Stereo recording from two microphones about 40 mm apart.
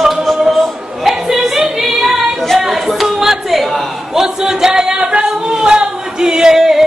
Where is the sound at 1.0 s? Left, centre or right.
Centre.